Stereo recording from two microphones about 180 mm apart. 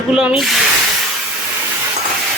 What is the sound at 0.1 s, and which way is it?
Speech, 5° right (ahead or behind).